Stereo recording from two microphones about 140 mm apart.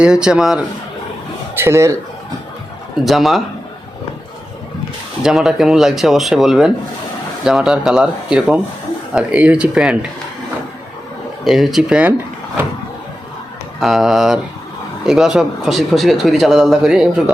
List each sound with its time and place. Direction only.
0.0 s speech: 5° right (ahead or behind)
1.5 s speech: 20° right (ahead or behind)
3.0 s speech: centre (ahead or behind)
5.2 s speech: 5° right (ahead or behind)
11.4 s speech: centre (ahead or behind)
13.7 s speech: centre (ahead or behind)